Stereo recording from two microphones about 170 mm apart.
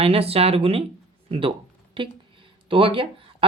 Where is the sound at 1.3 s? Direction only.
30° right (ahead or behind).